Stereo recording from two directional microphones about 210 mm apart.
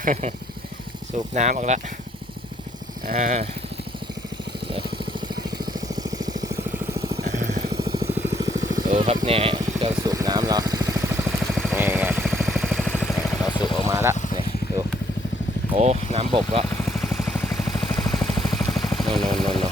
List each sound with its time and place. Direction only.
0.0 s speech: 35° right (ahead or behind)
3.1 s speech: 35° right (ahead or behind)
5.5 s vehicle: 20° right (ahead or behind)
7.3 s vehicle: 35° right (ahead or behind)
7.7 s vehicle: 20° right (ahead or behind)
12.2 s vehicle: centre (ahead or behind)
13.5 s vehicle: 20° left (ahead or behind)
13.8 s speech: 10° right (ahead or behind)
15.7 s speech: 30° right (ahead or behind)
16.6 s vehicle: 5° left (ahead or behind)